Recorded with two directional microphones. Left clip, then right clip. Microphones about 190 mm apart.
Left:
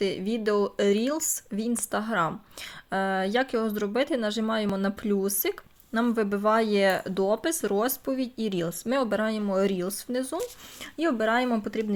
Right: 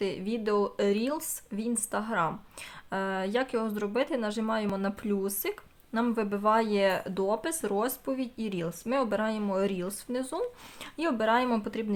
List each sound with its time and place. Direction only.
0.0 s speech: 15° left (ahead or behind)